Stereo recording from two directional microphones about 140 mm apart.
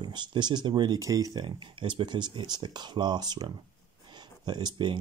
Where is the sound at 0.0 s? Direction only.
35° right (ahead or behind).